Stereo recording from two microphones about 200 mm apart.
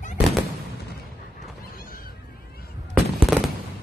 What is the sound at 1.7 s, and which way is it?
Neigh, 45° left (ahead or behind).